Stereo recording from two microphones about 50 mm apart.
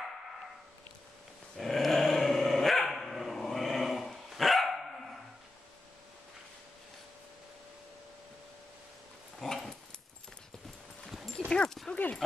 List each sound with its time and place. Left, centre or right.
1.6 s dog: centre
9.4 s dog: centre
11.3 s dog: centre